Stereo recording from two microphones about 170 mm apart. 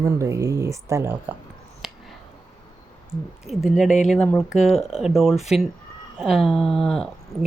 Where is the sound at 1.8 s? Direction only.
5° right (ahead or behind).